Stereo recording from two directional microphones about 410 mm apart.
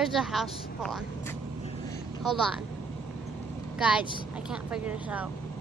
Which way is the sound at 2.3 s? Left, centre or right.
Centre.